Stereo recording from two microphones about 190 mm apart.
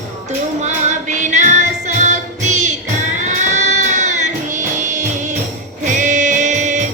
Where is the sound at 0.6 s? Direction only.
40° right (ahead or behind).